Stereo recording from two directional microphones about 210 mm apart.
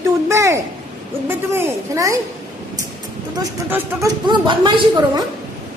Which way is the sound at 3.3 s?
10° right (ahead or behind).